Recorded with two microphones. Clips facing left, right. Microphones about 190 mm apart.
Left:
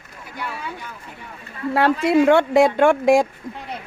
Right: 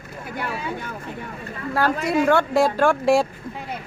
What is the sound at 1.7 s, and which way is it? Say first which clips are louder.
Speech: left 4 dB; 25° left (ahead or behind).